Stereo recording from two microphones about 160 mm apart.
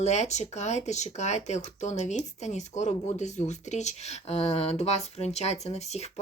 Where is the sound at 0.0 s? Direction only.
45° left (ahead or behind).